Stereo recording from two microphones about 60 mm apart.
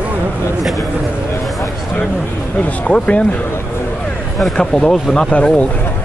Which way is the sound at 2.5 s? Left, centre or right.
Centre.